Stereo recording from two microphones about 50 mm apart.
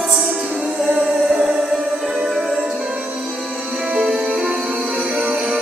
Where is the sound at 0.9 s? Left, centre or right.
Right.